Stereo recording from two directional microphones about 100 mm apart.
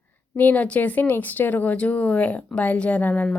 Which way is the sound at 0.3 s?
15° left (ahead or behind).